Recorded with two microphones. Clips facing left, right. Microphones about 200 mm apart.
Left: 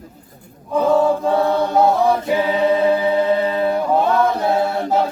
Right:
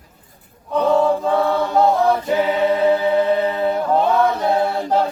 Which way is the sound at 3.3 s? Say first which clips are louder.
Left 1 dB; 20° right (ahead or behind).